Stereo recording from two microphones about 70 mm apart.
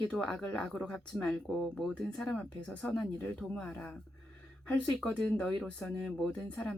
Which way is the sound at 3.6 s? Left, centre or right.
Left.